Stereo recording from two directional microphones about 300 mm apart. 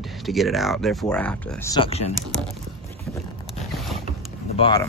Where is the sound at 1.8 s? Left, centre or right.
Centre.